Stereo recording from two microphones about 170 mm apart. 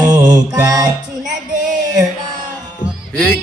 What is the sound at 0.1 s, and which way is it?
Music, 20° right (ahead or behind).